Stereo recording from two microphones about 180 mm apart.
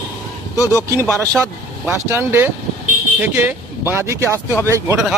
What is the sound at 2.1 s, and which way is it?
Speech, 10° right (ahead or behind).